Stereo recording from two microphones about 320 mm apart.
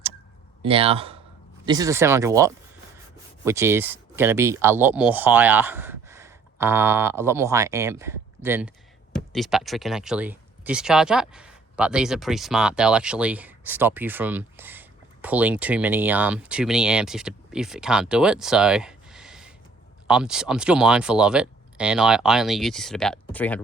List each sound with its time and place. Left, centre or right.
0.6 s speech: centre